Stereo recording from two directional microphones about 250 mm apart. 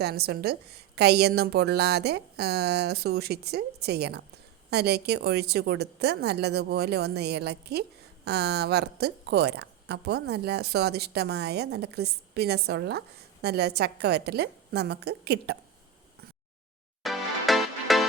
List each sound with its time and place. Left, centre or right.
0.0 s a woman's voice: right
17.0 s music: centre